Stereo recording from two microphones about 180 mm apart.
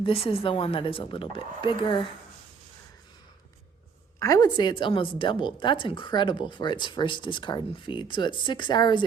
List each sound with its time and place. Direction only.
0.0 s a woman's voice: 30° left (ahead or behind)
4.2 s a woman's voice: 20° left (ahead or behind)